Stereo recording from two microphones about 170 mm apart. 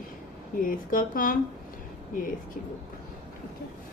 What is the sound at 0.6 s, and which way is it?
Speech, 55° left (ahead or behind).